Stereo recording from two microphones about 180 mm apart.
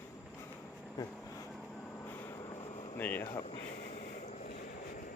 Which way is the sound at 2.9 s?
10° left (ahead or behind).